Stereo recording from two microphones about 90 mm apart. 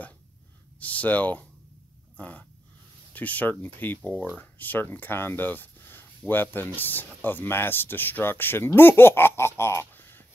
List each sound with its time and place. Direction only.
0.7 s speech: 15° left (ahead or behind)
2.1 s dog: 15° left (ahead or behind)
3.1 s speech: 15° left (ahead or behind)